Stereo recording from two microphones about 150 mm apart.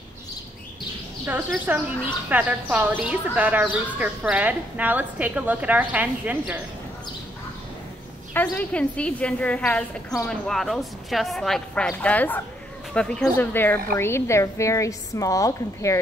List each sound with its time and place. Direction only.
1.2 s speech: 10° right (ahead or behind)
8.3 s a woman's voice: 10° left (ahead or behind)